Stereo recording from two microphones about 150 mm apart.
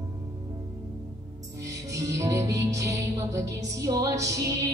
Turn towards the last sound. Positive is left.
turn(degrees=-20)  # may be behind; listen again after turning